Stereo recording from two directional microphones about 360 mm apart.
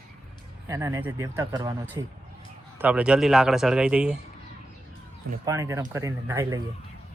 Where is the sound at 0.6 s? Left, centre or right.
Centre.